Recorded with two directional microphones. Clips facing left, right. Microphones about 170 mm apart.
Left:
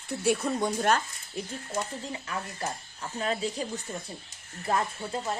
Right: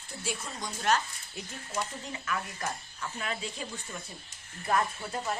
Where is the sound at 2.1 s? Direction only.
30° left (ahead or behind).